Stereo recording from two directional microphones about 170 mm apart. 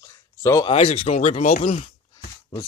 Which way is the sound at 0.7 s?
35° left (ahead or behind).